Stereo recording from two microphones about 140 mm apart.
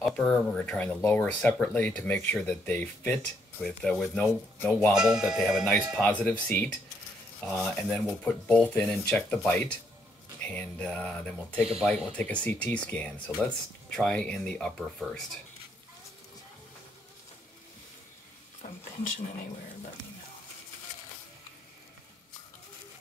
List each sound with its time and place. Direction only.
0.0 s speech: 5° left (ahead or behind)
4.9 s speech: 5° right (ahead or behind)
5.9 s speech: 10° left (ahead or behind)
18.6 s speech: 80° left